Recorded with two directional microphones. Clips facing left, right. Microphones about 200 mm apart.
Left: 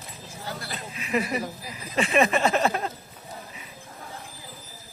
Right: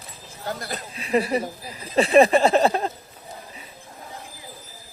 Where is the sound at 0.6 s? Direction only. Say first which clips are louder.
Right 3 dB; 40° right (ahead or behind).